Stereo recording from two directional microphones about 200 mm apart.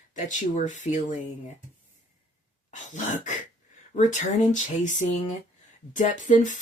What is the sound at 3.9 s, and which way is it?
Speech, 40° left (ahead or behind).